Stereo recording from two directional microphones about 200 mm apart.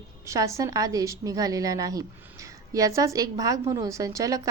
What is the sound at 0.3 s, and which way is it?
A woman's voice, 15° right (ahead or behind).